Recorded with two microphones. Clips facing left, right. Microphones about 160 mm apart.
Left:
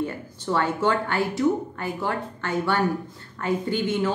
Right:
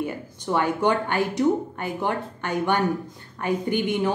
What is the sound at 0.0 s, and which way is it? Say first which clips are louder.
A woman's voice: even; 15° right (ahead or behind).